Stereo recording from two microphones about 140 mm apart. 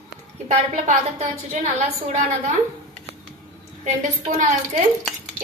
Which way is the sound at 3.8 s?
60° right (ahead or behind).